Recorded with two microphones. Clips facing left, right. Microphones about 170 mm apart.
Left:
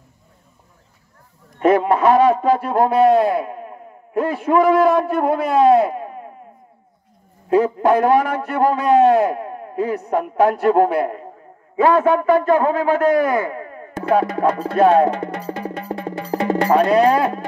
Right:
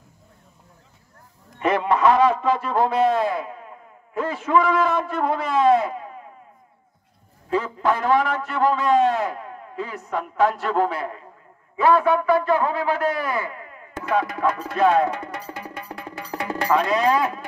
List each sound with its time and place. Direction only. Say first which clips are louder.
1.6 s a man's voice: left 5 dB; 50° left (ahead or behind)
7.4 s a man's voice: left 7 dB; 50° left (ahead or behind)
14.0 s music: left 5 dB; 30° left (ahead or behind)
16.9 s a man's voice: left 6 dB; 55° left (ahead or behind)